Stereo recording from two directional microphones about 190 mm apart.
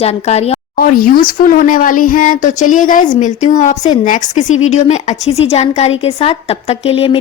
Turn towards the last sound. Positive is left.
turn(degrees=25)  # may be behind; listen again after turning